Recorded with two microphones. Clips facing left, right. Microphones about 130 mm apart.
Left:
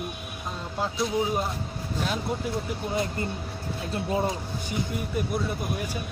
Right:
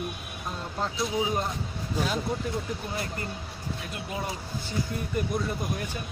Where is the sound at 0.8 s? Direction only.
Centre (ahead or behind).